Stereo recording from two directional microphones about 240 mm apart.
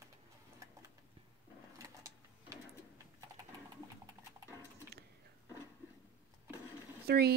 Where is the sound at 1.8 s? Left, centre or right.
Centre.